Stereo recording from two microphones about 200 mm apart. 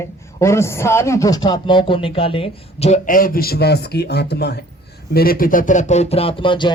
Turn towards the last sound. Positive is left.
turn(degrees=25)  # may be behind; listen again after turning